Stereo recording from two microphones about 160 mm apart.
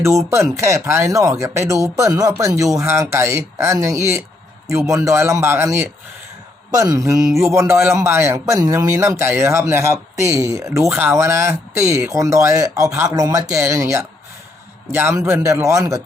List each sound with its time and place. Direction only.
0.0 s a man's voice: 15° right (ahead or behind)